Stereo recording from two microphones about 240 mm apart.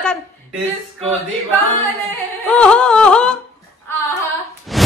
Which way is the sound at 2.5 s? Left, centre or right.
Centre.